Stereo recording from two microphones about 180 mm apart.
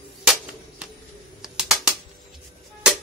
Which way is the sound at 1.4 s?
5° right (ahead or behind).